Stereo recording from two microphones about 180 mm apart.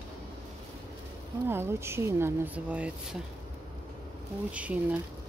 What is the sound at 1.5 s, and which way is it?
Speech, 15° right (ahead or behind).